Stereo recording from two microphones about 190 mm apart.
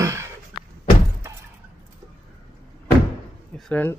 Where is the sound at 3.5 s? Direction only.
5° left (ahead or behind).